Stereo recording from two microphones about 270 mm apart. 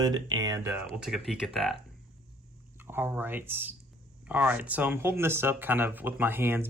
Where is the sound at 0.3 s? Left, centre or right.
Centre.